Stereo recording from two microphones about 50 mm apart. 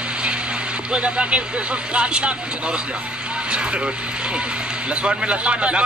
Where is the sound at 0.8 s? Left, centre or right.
Centre.